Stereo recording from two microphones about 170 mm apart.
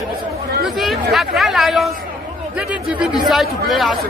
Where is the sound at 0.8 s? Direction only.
Centre (ahead or behind).